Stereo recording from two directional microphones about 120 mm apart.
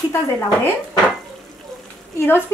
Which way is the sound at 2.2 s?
20° left (ahead or behind).